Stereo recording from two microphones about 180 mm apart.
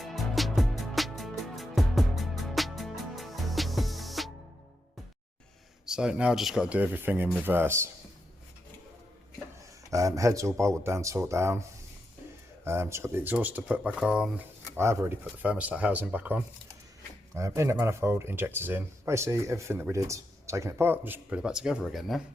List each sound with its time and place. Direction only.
0.0 s music: centre (ahead or behind)
5.8 s speech: 5° right (ahead or behind)
9.9 s speech: 15° right (ahead or behind)
12.6 s speech: 15° right (ahead or behind)